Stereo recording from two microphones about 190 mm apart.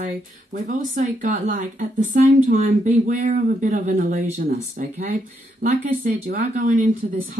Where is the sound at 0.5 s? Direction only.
40° right (ahead or behind).